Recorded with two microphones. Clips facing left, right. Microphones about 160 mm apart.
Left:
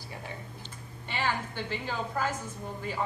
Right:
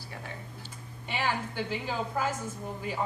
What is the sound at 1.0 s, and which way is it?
A woman's voice, 10° right (ahead or behind).